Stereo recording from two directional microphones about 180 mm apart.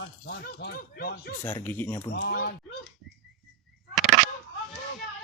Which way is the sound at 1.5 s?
10° left (ahead or behind).